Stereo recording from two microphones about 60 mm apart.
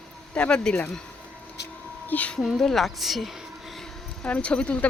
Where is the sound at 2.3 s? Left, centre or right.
Centre.